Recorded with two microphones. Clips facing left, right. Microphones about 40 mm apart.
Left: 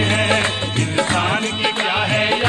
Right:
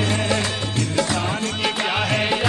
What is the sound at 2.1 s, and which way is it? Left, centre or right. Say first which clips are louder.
Music: left 3 dB; left.